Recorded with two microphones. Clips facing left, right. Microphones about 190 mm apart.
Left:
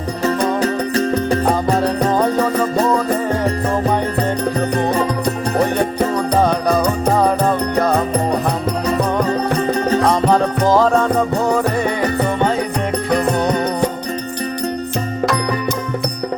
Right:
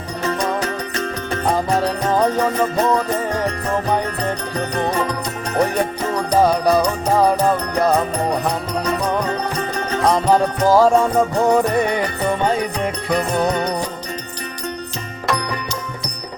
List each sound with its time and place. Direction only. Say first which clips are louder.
0.3 s music: left 4 dB; 35° left (ahead or behind)
6.3 s music: right 3 dB; 10° right (ahead or behind)
10.7 s music: right 1 dB; 10° right (ahead or behind)